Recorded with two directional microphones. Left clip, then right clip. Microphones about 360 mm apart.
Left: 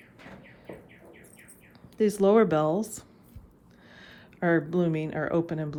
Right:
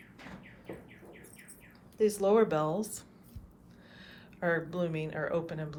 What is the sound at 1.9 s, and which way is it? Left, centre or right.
Speech, left.